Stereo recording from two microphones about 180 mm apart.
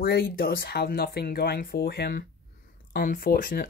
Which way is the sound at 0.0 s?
60° left (ahead or behind).